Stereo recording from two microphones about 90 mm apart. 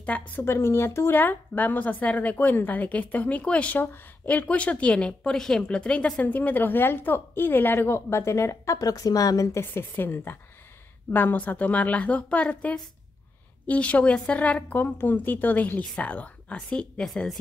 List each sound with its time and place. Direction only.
0.3 s a woman's voice: 25° left (ahead or behind)
9.6 s a woman's voice: 25° left (ahead or behind); by 17.4 s 5° left (ahead or behind)